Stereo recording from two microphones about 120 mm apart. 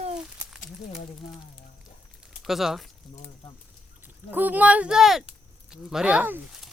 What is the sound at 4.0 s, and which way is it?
Speech, 15° right (ahead or behind).